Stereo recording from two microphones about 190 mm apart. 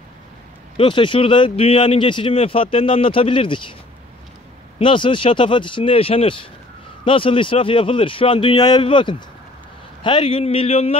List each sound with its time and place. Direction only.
0.7 s speech: 25° left (ahead or behind)
4.7 s speech: 25° left (ahead or behind)